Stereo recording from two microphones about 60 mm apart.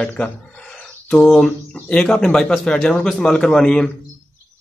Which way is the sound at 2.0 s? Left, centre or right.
Centre.